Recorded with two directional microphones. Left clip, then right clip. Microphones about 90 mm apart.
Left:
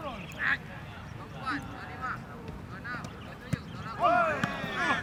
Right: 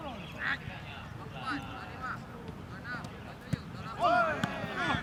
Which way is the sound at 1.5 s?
Centre (ahead or behind).